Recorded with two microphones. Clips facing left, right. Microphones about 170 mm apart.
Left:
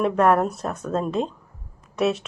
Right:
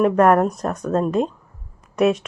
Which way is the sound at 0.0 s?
5° right (ahead or behind).